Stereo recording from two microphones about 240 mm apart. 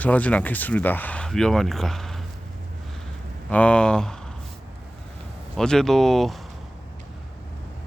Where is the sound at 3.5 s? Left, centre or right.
Centre.